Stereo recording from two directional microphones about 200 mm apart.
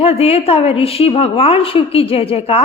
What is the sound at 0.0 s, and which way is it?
A woman's voice, 30° left (ahead or behind).